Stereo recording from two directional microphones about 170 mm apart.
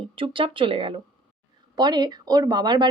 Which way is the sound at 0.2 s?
30° right (ahead or behind).